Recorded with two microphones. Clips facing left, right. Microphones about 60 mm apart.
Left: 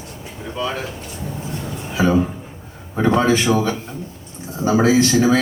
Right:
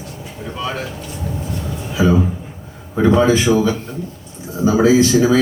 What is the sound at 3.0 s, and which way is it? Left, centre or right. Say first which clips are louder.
Speech: right 3 dB; left.